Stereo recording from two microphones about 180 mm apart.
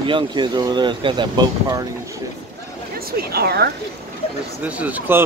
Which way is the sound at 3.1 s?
60° right (ahead or behind).